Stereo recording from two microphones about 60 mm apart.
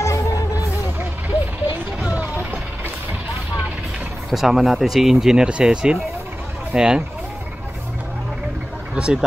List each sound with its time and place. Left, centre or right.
0.0 s music: left
4.3 s speech: centre
8.9 s speech: centre